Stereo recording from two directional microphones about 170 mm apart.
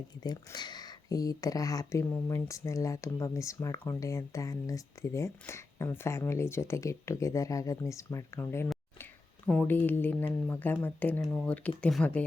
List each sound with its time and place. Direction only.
0.2 s speech: 25° left (ahead or behind); by 12.2 s 5° left (ahead or behind)